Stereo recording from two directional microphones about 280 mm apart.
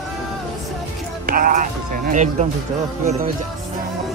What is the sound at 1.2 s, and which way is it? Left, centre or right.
Music, right.